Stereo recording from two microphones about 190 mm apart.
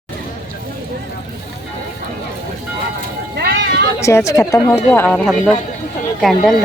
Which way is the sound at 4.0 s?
15° left (ahead or behind).